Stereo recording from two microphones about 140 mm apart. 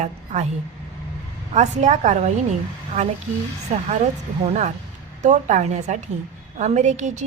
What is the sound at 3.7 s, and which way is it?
A woman's voice, 55° right (ahead or behind).